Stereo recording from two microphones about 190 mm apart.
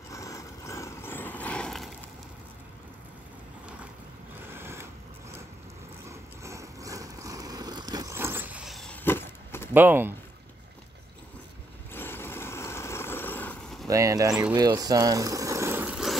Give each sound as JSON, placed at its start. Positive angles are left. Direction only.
{"t": 0.1, "sound": "vehicle", "side_deg": 15}
{"t": 4.5, "sound": "vehicle", "side_deg": -10}
{"t": 6.0, "sound": "vehicle", "side_deg": -15}
{"t": 9.8, "sound": "speech", "side_deg": -10}
{"t": 11.9, "sound": "vehicle", "side_deg": 10}
{"t": 13.8, "sound": "speech", "side_deg": -15}
{"t": 14.5, "sound": "vehicle", "side_deg": -20}